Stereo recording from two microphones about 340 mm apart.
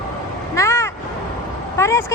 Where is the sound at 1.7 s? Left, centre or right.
Centre.